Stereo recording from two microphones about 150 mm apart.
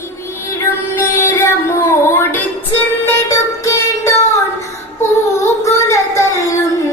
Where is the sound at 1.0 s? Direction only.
20° left (ahead or behind).